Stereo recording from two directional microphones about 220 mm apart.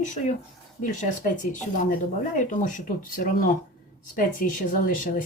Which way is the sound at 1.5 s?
35° left (ahead or behind).